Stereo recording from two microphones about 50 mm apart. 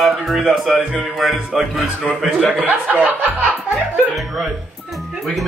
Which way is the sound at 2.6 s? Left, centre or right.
Right.